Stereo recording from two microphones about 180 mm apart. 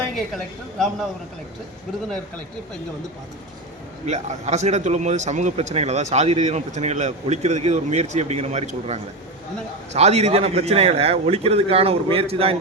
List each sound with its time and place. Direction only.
0.3 s a man's voice: centre (ahead or behind)
4.0 s a man's voice: 40° right (ahead or behind)